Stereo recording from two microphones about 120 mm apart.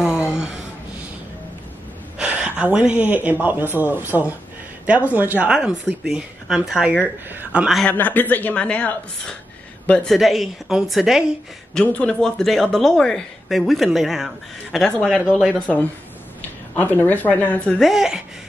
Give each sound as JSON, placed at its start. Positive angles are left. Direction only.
{"t": 2.1, "sound": "gasp", "side_deg": -10}
{"t": 3.4, "sound": "speech", "side_deg": -15}
{"t": 7.8, "sound": "a woman's voice", "side_deg": 15}
{"t": 11.7, "sound": "a man's voice", "side_deg": 10}
{"t": 17.8, "sound": "a man's voice", "side_deg": -5}